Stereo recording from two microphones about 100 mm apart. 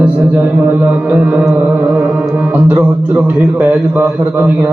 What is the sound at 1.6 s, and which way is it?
Music, 15° right (ahead or behind).